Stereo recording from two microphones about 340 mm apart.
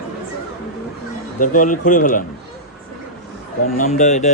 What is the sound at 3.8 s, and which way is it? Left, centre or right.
Speech, centre.